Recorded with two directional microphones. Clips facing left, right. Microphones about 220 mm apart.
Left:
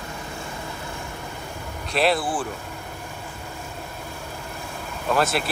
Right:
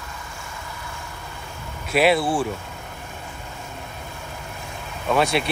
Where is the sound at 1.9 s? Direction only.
Centre (ahead or behind).